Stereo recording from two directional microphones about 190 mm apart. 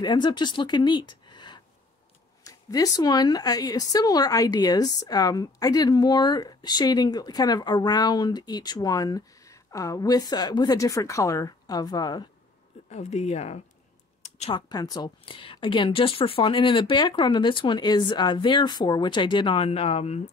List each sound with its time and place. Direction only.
0.0 s speech: 25° left (ahead or behind)
12.9 s speech: 35° left (ahead or behind)
14.2 s a sound: 35° left (ahead or behind)
14.7 s speech: 20° left (ahead or behind)